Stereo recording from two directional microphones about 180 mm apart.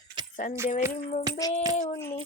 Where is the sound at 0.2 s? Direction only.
25° right (ahead or behind).